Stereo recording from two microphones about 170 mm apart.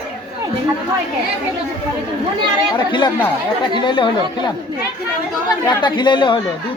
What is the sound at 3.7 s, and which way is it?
Speech, 30° left (ahead or behind).